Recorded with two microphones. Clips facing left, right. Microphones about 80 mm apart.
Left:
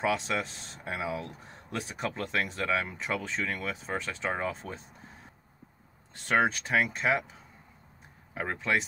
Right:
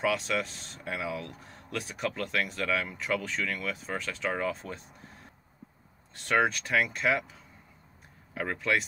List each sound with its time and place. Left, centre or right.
0.0 s speech: left
6.2 s speech: left
8.4 s speech: left